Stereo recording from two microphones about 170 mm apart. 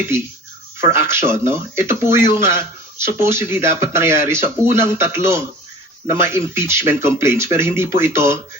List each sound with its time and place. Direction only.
0.8 s speech: 15° right (ahead or behind)